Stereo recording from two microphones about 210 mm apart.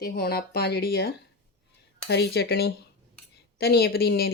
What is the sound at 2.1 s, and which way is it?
Speech, 50° left (ahead or behind).